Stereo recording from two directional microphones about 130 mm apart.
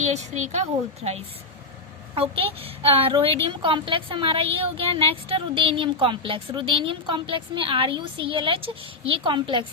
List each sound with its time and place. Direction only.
0.0 s a woman's voice: 60° right (ahead or behind)
2.1 s speech: 45° right (ahead or behind)